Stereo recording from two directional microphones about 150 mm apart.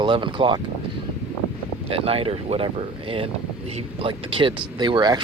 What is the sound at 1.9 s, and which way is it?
Speech, 40° right (ahead or behind).